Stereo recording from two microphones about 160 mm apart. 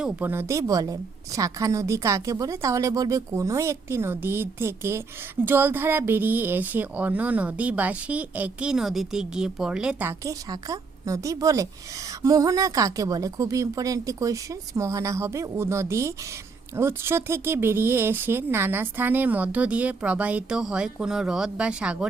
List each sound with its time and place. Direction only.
0.0 s speech: 10° right (ahead or behind)
10.1 s speech: 20° right (ahead or behind)